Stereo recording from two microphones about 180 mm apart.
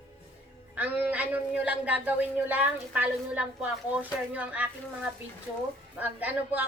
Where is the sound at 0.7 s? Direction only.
10° right (ahead or behind).